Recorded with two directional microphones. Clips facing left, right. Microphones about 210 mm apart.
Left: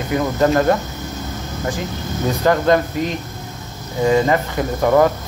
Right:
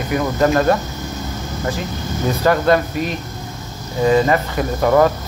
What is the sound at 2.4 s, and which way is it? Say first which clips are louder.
Speech: even; 20° left (ahead or behind).